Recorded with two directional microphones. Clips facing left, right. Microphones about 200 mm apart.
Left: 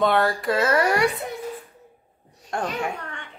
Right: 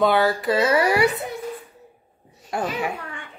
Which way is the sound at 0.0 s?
Centre (ahead or behind).